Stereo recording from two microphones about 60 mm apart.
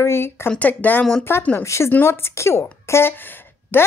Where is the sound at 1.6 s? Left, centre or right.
Left.